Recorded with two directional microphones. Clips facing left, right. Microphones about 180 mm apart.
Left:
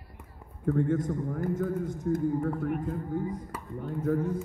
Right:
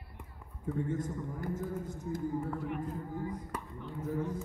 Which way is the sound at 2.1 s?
55° left (ahead or behind).